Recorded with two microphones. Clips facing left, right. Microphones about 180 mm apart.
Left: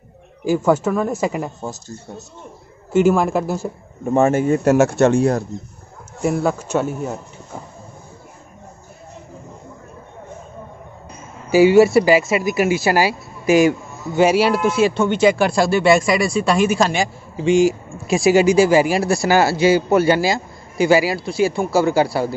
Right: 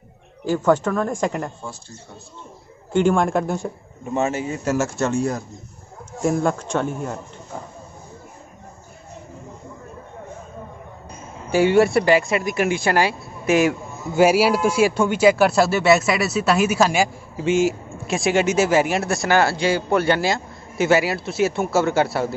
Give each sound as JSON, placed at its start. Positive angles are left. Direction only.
{"t": 0.5, "sound": "speech", "side_deg": 10}
{"t": 1.6, "sound": "speech", "side_deg": 40}
{"t": 2.9, "sound": "speech", "side_deg": 5}
{"t": 4.0, "sound": "a man's voice", "side_deg": 50}
{"t": 6.2, "sound": "speech", "side_deg": 5}
{"t": 11.5, "sound": "speech", "side_deg": 5}